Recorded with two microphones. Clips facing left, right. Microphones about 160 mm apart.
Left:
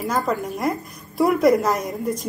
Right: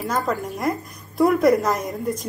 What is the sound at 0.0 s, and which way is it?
A woman's voice, centre (ahead or behind).